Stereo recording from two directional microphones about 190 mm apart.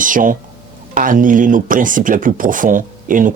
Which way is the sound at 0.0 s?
45° right (ahead or behind).